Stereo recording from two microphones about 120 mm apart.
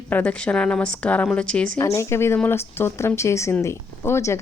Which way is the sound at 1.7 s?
25° left (ahead or behind).